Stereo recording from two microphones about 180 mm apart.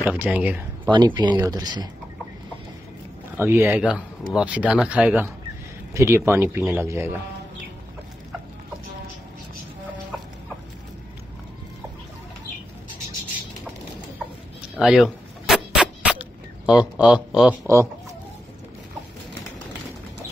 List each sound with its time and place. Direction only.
0.0 s speech: 10° right (ahead or behind)
0.9 s speech: 25° right (ahead or behind)
3.3 s speech: 15° right (ahead or behind)
14.8 s a sound: centre (ahead or behind)